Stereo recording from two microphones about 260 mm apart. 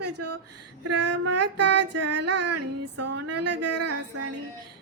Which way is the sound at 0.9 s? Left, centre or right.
Right.